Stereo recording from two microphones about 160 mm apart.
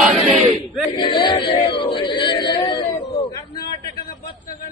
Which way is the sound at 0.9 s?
30° left (ahead or behind).